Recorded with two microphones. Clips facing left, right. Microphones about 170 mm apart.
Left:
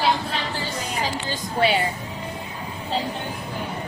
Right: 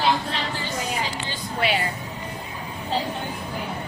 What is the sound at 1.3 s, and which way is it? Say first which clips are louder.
Speech: left 4 dB; 35° left (ahead or behind).